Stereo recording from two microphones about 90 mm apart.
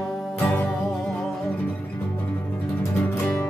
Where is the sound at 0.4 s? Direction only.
25° left (ahead or behind).